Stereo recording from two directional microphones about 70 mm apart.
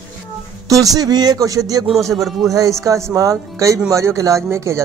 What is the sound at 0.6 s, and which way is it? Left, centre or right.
Speech, right.